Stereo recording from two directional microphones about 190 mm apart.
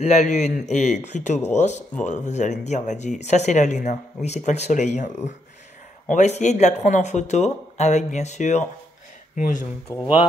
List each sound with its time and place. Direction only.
0.0 s speech: 35° left (ahead or behind)